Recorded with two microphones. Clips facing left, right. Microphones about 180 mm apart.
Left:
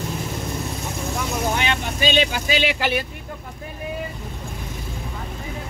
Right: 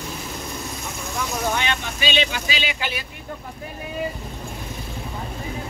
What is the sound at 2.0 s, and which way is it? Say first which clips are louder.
Speech: left 4 dB; 45° left (ahead or behind).